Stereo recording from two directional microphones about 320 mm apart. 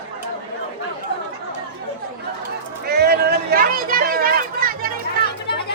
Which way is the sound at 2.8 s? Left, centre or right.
Right.